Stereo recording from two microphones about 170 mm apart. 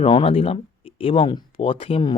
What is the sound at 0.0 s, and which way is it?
Speech, 35° left (ahead or behind).